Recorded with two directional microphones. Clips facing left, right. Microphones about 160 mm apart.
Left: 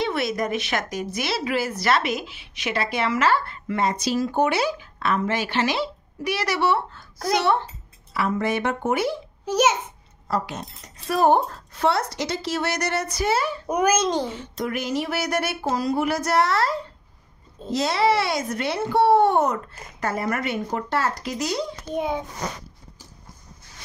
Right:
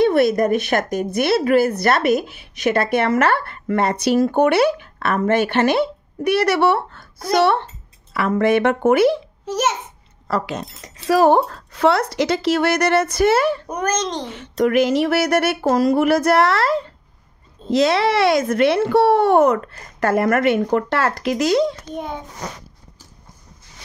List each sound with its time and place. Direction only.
0.0 s speech: 55° right (ahead or behind); by 9.2 s 90° right
9.5 s a child's voice: centre (ahead or behind)
10.2 s speech: 90° right; by 13.6 s 65° right (ahead or behind)
13.7 s a child's voice: 5° left (ahead or behind)
14.3 s speech: 75° right (ahead or behind); by 21.7 s 90° right
21.8 s a child's voice: 5° left (ahead or behind)